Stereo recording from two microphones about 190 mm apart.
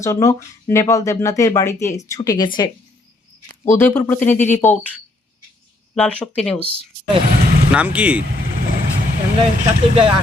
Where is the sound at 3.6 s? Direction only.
15° left (ahead or behind).